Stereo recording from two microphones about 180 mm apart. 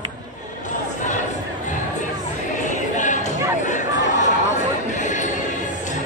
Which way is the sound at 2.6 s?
45° left (ahead or behind).